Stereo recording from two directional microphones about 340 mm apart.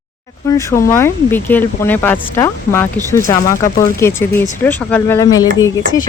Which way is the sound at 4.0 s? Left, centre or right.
Centre.